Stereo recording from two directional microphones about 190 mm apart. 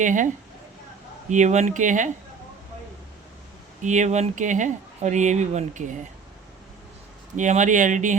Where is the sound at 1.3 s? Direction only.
40° right (ahead or behind).